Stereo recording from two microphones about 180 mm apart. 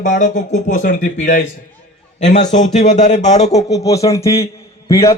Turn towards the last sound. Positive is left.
turn(degrees=15)  # may be behind; listen again after turning